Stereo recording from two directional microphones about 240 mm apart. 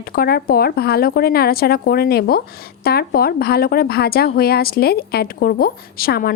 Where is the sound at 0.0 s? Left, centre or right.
Left.